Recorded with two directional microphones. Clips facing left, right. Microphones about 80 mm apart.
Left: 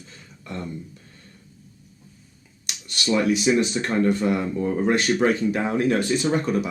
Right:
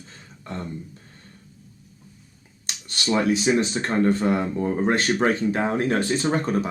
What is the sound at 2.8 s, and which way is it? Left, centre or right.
Speech, right.